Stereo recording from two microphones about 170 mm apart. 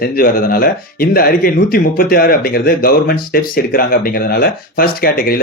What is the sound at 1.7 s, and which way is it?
Speech, 60° left (ahead or behind).